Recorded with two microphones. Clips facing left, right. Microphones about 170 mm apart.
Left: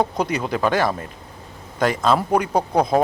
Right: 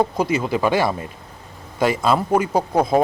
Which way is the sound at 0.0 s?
5° right (ahead or behind).